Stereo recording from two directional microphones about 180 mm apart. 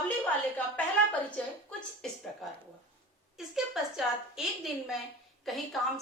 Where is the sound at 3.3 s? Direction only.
Centre (ahead or behind).